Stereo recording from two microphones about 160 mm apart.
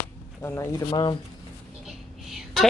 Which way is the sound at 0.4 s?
15° left (ahead or behind).